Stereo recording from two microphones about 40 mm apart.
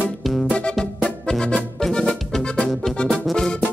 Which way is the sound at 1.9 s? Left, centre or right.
Left.